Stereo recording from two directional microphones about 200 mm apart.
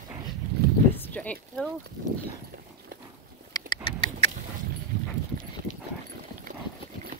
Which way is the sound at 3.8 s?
25° left (ahead or behind).